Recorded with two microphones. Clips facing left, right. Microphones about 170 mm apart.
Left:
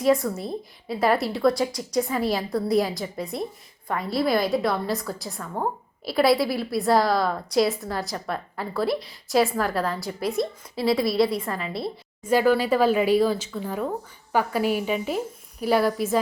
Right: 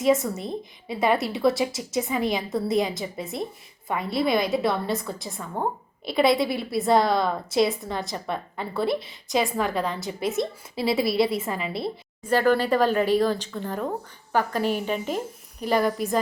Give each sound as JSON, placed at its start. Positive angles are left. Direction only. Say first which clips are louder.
{"t": 0.4, "sound": "a woman's voice", "louder": "left 1 dB", "side_deg": 0}